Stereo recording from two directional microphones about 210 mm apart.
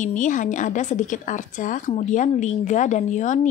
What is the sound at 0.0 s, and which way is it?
A woman's voice, 35° left (ahead or behind).